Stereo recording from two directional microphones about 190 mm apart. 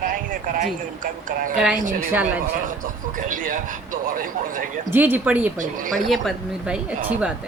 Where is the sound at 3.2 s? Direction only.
45° right (ahead or behind).